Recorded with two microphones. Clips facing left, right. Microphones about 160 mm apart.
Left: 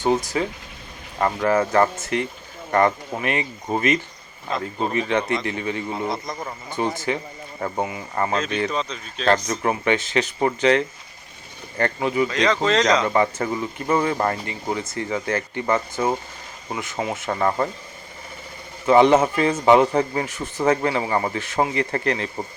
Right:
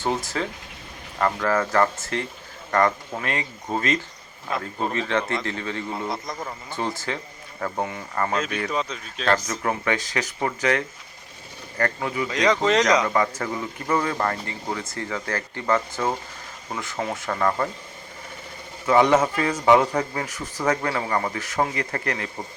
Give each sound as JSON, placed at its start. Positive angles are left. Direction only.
{"t": 0.0, "sound": "speech", "side_deg": 15}
{"t": 5.9, "sound": "a man's voice", "side_deg": 0}
{"t": 6.7, "sound": "speech", "side_deg": 20}
{"t": 7.8, "sound": "a man's voice", "side_deg": 5}
{"t": 8.4, "sound": "speech", "side_deg": 25}
{"t": 8.7, "sound": "speech", "side_deg": -5}
{"t": 9.2, "sound": "speech", "side_deg": 25}
{"t": 12.3, "sound": "speech", "side_deg": -15}
{"t": 13.1, "sound": "speech", "side_deg": 25}
{"t": 18.9, "sound": "speech", "side_deg": 25}